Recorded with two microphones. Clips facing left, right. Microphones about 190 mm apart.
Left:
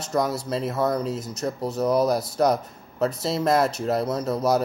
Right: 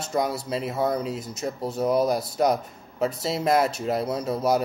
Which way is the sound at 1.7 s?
25° right (ahead or behind).